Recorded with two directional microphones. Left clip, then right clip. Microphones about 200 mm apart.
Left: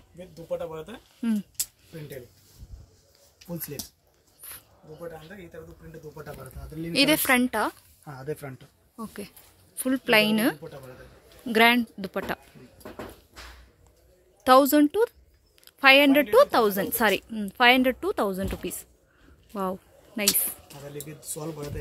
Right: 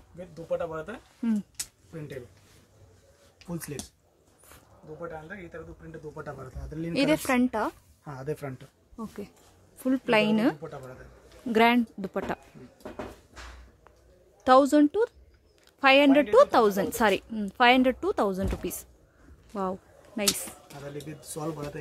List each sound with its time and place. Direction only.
0.3 s speech: 10° right (ahead or behind)
3.4 s speech: 5° right (ahead or behind)
4.5 s a sound: 5° left (ahead or behind)
6.9 s a woman's voice: centre (ahead or behind)
8.1 s speech: 10° right (ahead or behind)
8.9 s a woman's voice: 5° left (ahead or behind)
14.4 s a woman's voice: 10° left (ahead or behind)
19.5 s a sound: 10° left (ahead or behind)
20.6 s speech: 10° right (ahead or behind)